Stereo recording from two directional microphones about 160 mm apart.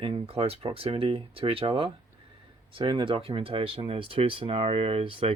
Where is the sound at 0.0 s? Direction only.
35° right (ahead or behind).